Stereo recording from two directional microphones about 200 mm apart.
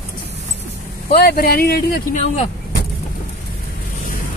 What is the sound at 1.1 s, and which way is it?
Speech, 50° left (ahead or behind).